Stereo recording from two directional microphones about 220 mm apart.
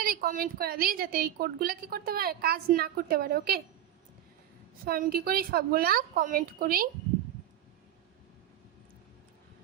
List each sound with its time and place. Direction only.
0.0 s a woman's voice: 40° right (ahead or behind)
4.9 s a woman's voice: 40° right (ahead or behind)